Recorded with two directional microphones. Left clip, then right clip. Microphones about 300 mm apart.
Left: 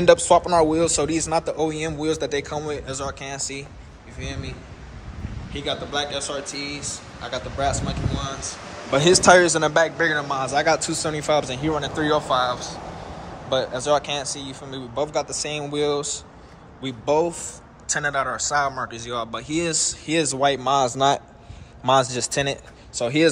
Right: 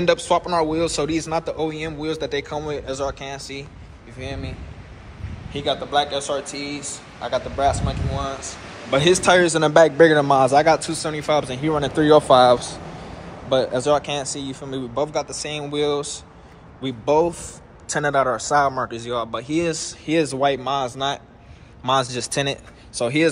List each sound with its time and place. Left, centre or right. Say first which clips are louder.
0.0 s a man's voice: left 4 dB; centre
11.8 s speech: right 9 dB; right
13.5 s a man's voice: right 3 dB; centre